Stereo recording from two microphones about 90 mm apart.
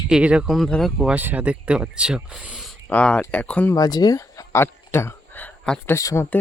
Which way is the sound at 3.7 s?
45° left (ahead or behind).